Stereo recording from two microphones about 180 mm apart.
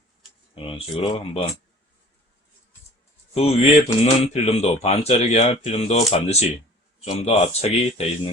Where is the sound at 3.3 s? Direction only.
35° left (ahead or behind).